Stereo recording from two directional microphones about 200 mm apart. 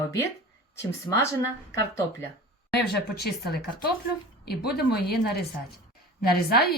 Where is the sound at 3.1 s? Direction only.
50° left (ahead or behind).